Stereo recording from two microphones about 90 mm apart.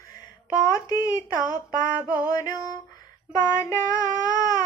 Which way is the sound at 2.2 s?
40° left (ahead or behind).